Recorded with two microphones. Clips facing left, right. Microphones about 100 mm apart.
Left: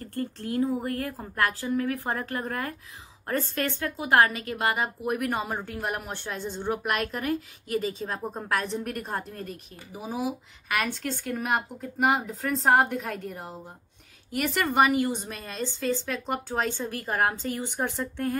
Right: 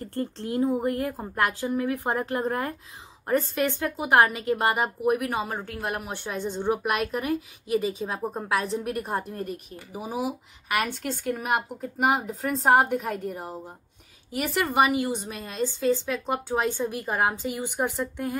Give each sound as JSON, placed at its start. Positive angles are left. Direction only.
{"t": 0.0, "sound": "a woman's voice", "side_deg": -25}
{"t": 5.0, "sound": "a woman's voice", "side_deg": -5}